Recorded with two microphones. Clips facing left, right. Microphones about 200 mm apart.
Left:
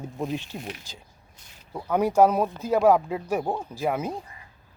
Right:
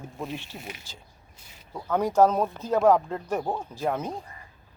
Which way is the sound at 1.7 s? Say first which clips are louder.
Left 2 dB; 10° left (ahead or behind).